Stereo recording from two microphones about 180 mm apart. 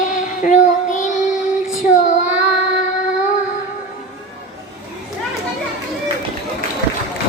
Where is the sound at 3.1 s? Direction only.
45° left (ahead or behind).